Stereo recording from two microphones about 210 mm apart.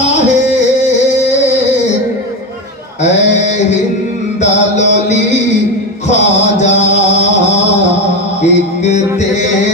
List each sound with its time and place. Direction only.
3.0 s a sound: 35° left (ahead or behind)
4.4 s music: 35° left (ahead or behind)
8.4 s music: 35° left (ahead or behind)